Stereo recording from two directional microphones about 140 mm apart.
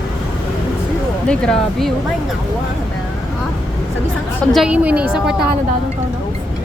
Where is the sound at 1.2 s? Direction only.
5° left (ahead or behind).